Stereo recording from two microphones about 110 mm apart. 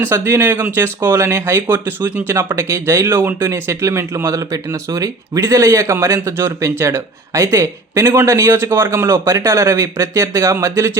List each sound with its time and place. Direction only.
0.0 s speech: 20° right (ahead or behind)